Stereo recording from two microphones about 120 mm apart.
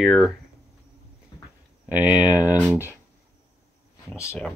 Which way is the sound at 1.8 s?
10° right (ahead or behind).